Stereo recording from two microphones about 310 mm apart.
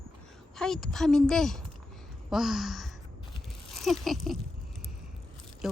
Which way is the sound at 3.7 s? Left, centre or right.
Centre.